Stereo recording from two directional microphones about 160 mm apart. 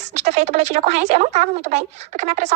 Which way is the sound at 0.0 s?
45° right (ahead or behind).